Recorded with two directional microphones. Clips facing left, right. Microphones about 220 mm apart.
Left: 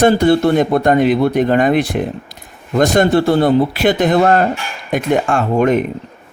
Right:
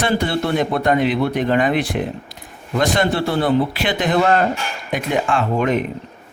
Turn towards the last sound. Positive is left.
turn(degrees=45)  # may be behind; listen again after turning